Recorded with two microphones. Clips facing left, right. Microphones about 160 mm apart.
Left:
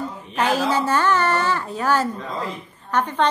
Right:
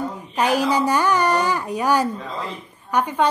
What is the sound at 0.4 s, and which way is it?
A woman's voice, 15° right (ahead or behind).